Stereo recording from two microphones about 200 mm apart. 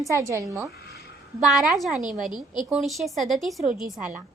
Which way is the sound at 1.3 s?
Centre (ahead or behind).